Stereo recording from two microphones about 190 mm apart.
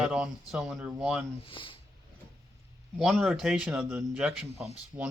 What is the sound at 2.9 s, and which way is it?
A man's voice, centre (ahead or behind).